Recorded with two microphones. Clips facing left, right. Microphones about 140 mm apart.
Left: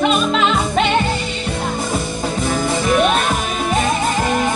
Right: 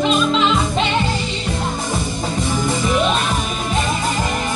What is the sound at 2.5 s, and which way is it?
Music, 55° left (ahead or behind).